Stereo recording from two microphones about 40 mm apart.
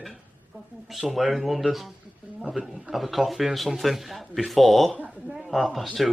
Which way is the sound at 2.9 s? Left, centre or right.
Centre.